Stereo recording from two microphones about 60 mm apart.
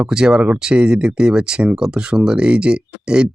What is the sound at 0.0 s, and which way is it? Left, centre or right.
Speech, centre.